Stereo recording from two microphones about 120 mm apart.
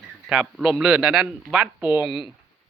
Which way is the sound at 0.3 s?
5° right (ahead or behind).